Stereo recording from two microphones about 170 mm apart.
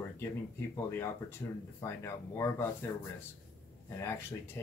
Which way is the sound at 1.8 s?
15° left (ahead or behind).